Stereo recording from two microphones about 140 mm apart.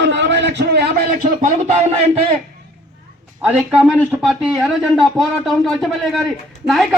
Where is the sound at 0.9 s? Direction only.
70° right (ahead or behind); by 2.3 s 50° right (ahead or behind).